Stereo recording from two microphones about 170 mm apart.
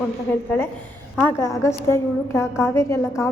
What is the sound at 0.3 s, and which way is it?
A woman's voice, 15° left (ahead or behind).